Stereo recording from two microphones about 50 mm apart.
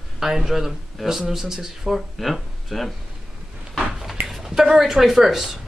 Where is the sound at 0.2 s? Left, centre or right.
Centre.